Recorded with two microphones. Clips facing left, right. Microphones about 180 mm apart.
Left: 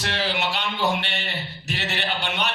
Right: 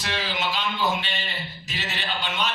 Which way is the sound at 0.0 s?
65° left (ahead or behind).